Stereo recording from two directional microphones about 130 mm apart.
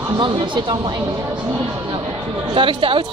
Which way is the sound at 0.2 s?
35° right (ahead or behind).